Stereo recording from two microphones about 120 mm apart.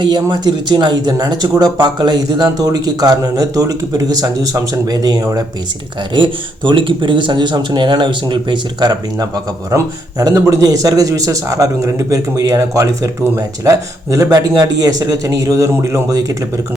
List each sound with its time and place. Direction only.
0.0 s speech: 40° right (ahead or behind)
6.1 s speech: 40° right (ahead or behind)